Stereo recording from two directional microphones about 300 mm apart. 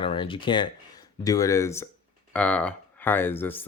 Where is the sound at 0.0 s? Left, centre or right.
Centre.